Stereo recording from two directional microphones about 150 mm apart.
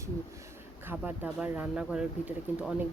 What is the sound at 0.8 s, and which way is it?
Speech, 10° right (ahead or behind).